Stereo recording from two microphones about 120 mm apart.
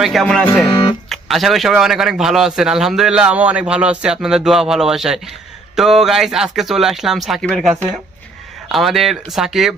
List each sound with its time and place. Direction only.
0.0 s speech: centre (ahead or behind)
0.7 s speech: 40° left (ahead or behind)
1.1 s speech: centre (ahead or behind)
8.7 s speech: centre (ahead or behind)